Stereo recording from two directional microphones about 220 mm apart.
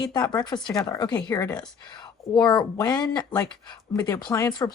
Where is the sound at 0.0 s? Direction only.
20° left (ahead or behind).